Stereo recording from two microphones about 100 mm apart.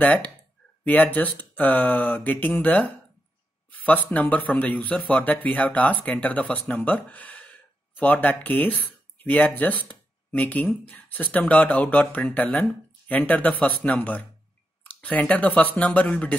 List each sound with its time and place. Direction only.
0.0 s speech: 15° left (ahead or behind)